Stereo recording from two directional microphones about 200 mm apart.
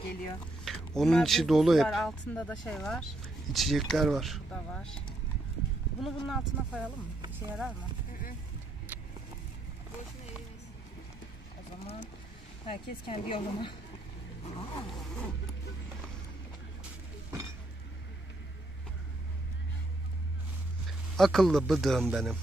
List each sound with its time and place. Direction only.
0.7 s speech: centre (ahead or behind)
12.6 s a woman's voice: 25° left (ahead or behind)
14.9 s vehicle: centre (ahead or behind)
21.2 s speech: centre (ahead or behind)